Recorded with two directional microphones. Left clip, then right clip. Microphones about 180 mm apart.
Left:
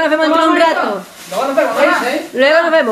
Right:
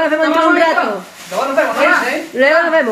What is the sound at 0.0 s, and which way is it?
Speech, centre (ahead or behind).